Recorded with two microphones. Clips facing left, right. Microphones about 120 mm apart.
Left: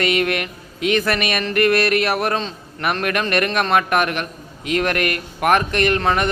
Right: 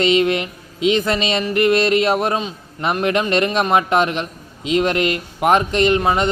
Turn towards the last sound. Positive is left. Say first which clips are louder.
# right 2 dB
turn(degrees=-15)  # may be behind; listen again after turning